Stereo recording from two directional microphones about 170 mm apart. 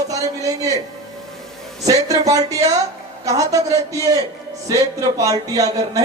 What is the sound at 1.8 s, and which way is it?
Speech, 20° right (ahead or behind).